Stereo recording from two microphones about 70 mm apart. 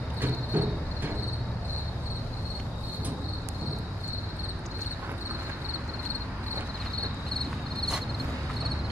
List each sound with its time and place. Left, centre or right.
0.2 s cricket: right